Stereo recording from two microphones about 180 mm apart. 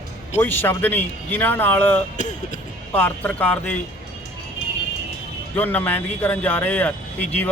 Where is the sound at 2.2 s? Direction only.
40° left (ahead or behind).